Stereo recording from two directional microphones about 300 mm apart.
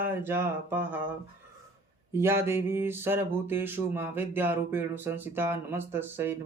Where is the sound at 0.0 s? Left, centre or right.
Centre.